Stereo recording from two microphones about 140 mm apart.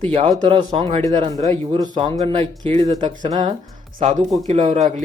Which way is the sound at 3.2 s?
30° right (ahead or behind).